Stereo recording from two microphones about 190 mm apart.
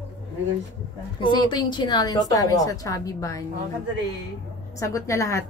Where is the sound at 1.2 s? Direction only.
25° left (ahead or behind).